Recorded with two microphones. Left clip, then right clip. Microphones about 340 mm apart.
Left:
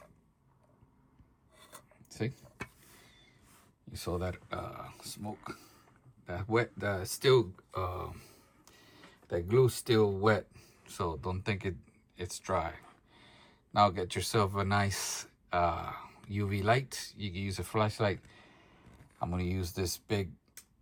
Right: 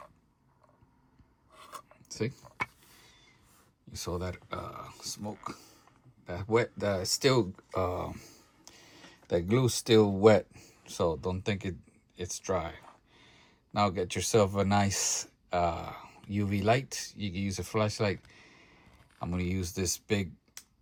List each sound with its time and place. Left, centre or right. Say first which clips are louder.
2.0 s speech: right 3 dB; centre
3.9 s speech: even; centre